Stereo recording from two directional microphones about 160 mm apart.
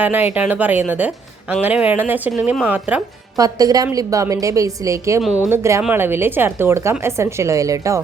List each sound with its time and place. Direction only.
0.0 s speech: 10° right (ahead or behind)
3.3 s a woman's voice: 20° right (ahead or behind)